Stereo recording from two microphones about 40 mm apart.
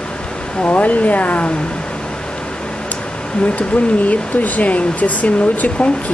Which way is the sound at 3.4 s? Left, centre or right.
Left.